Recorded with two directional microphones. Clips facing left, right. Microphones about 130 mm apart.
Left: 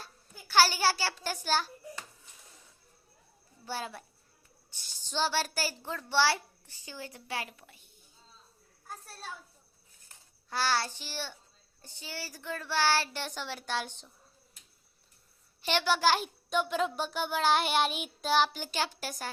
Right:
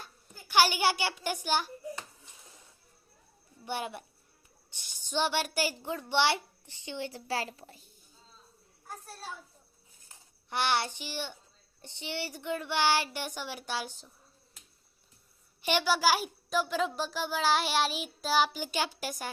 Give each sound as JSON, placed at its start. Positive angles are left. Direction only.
{"t": 0.0, "sound": "a child's voice", "side_deg": -15}
{"t": 3.7, "sound": "a child's voice", "side_deg": -20}
{"t": 10.5, "sound": "speech", "side_deg": -20}
{"t": 15.6, "sound": "a child's voice", "side_deg": -10}